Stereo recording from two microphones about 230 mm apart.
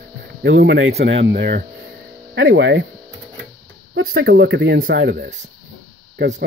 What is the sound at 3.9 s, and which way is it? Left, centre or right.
Speech, right.